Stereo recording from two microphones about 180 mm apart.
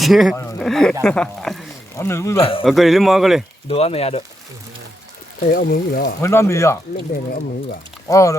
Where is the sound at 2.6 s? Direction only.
Centre (ahead or behind).